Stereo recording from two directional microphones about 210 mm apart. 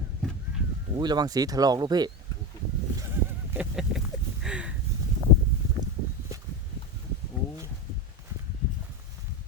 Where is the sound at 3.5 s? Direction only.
5° right (ahead or behind).